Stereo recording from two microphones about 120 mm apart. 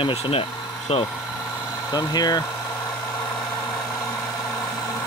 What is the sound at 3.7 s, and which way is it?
Engine, 25° left (ahead or behind).